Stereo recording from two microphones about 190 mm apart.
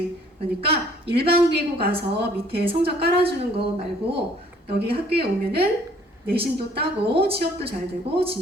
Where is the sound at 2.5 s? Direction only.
30° right (ahead or behind).